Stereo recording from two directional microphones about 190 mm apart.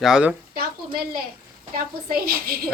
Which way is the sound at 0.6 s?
50° right (ahead or behind).